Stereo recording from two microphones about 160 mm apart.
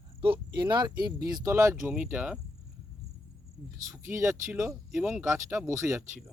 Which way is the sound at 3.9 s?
15° right (ahead or behind).